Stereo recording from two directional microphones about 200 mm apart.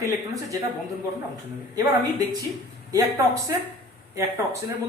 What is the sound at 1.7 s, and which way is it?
A woman's voice, 20° right (ahead or behind).